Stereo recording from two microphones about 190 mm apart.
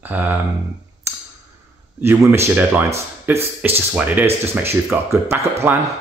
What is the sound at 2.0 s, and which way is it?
Speech, 15° right (ahead or behind).